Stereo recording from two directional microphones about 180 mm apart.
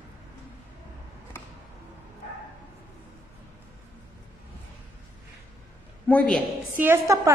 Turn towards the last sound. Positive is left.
turn(degrees=-15)  # may be behind; listen again after turning